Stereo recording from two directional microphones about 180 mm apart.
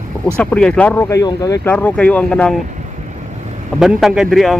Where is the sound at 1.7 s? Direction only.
5° left (ahead or behind).